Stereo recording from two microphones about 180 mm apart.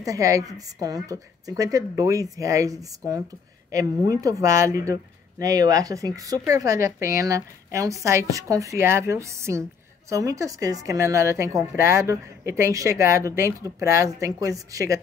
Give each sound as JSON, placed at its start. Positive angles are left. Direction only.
{"t": 0.0, "sound": "a woman's voice", "side_deg": -20}